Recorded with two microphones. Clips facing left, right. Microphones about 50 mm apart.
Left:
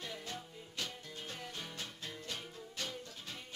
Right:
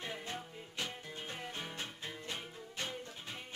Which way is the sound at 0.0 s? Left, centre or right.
Right.